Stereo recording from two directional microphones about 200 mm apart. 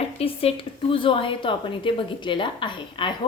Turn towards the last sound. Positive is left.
turn(degrees=25)  # may be behind; listen again after turning